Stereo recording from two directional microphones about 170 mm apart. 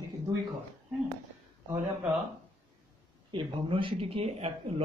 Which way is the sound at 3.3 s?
30° right (ahead or behind).